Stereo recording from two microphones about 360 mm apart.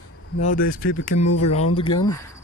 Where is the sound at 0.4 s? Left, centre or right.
Left.